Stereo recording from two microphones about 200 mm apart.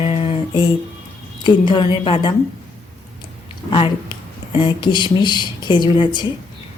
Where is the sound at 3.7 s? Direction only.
25° left (ahead or behind).